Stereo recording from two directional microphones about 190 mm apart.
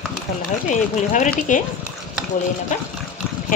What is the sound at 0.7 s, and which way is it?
Speech, 40° left (ahead or behind).